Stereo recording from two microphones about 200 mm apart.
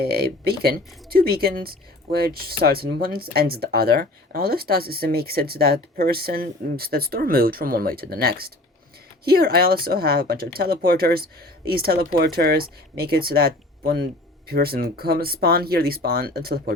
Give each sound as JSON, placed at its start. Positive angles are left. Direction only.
{"t": 0.0, "sound": "speech", "side_deg": -50}